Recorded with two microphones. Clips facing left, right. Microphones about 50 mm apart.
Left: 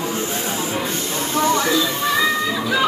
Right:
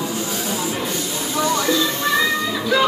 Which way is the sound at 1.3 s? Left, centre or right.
Left.